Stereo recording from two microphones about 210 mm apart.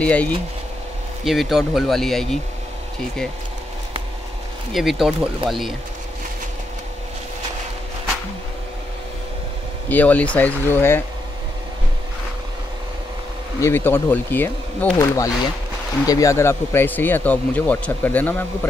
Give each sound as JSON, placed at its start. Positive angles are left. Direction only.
{"t": 0.0, "sound": "speech", "side_deg": 5}
{"t": 4.7, "sound": "speech", "side_deg": 0}
{"t": 9.8, "sound": "speech", "side_deg": 5}
{"t": 13.6, "sound": "speech", "side_deg": 10}